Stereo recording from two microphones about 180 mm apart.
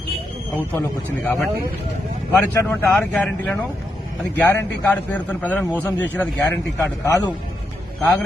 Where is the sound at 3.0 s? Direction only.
10° left (ahead or behind).